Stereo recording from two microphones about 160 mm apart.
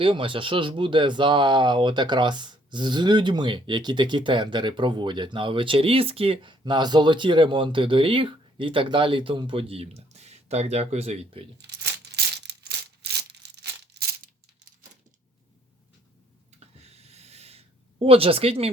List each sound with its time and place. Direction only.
0.0 s speech: 30° right (ahead or behind)
11.5 s a sound: 90° right
16.8 s snort: 40° right (ahead or behind)
18.0 s speech: 35° right (ahead or behind)